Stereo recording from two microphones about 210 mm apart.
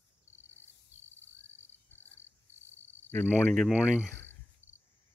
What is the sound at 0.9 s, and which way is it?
Cricket, 30° right (ahead or behind).